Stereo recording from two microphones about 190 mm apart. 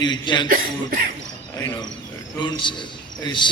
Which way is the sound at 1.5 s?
15° left (ahead or behind).